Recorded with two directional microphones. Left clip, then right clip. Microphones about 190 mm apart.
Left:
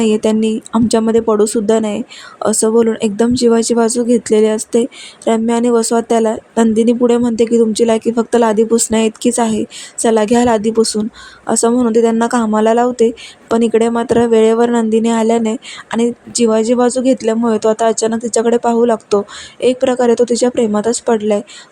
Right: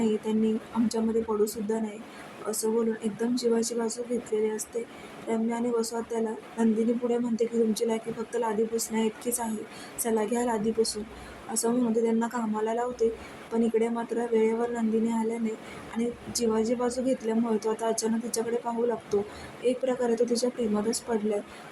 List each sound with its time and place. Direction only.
0.0 s speech: 50° left (ahead or behind)